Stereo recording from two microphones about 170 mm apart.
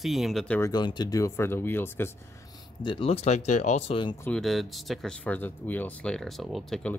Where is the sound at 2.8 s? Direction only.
35° left (ahead or behind).